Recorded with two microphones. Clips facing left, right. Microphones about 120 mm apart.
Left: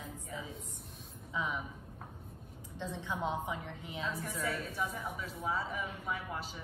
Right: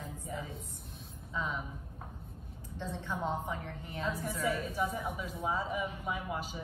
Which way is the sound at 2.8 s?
15° left (ahead or behind).